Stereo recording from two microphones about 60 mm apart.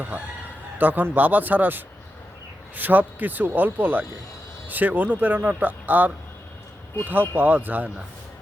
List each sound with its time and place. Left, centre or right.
0.8 s speech: right